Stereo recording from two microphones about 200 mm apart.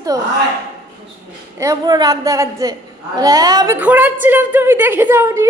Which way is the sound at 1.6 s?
20° right (ahead or behind).